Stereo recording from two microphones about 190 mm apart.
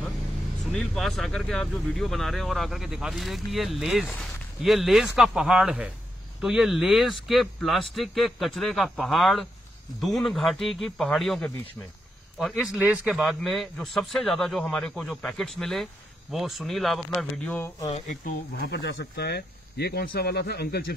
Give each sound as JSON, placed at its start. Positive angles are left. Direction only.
{"t": 0.7, "sound": "a man's voice", "side_deg": 0}
{"t": 17.6, "sound": "speech", "side_deg": 20}
{"t": 17.9, "sound": "speech", "side_deg": 40}
{"t": 18.6, "sound": "speech", "side_deg": 65}